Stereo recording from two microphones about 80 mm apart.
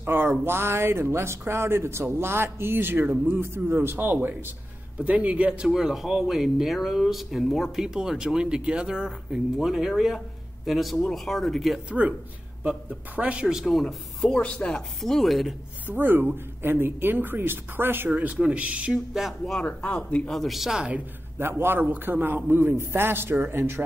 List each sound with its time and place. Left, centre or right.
0.0 s speech: right; by 11.8 s centre
12.6 s speech: centre
15.0 s speech: centre
15.9 s speech: right; by 19.3 s centre
19.4 s speech: centre
20.3 s speech: centre
21.4 s speech: right